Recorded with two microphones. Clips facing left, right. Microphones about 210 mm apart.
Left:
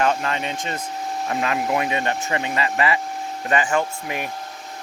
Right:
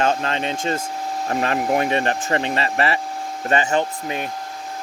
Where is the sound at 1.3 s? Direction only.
40° right (ahead or behind); by 4.3 s 25° right (ahead or behind).